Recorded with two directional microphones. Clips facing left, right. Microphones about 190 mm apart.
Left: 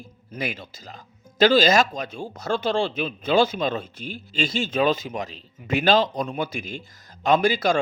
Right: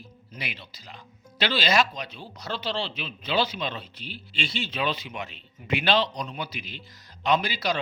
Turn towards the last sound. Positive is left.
turn(degrees=50)  # may be behind; listen again after turning